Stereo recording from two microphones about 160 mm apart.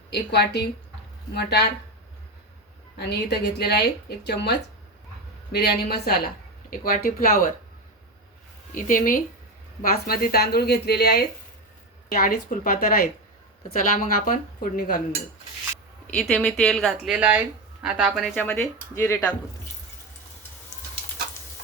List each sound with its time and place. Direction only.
0.1 s speech: 90° left
3.0 s a woman's voice: 90° left; by 7.5 s 65° left (ahead or behind)
8.7 s a woman's voice: 60° left (ahead or behind); by 11.3 s 85° left
12.1 s speech: 60° left (ahead or behind)
16.0 s speech: 5° left (ahead or behind)
18.3 s speech: 10° left (ahead or behind)